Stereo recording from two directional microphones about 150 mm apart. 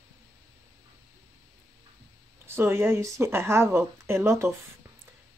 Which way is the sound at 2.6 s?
15° right (ahead or behind).